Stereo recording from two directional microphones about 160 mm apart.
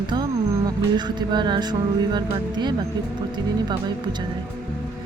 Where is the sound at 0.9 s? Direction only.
25° right (ahead or behind).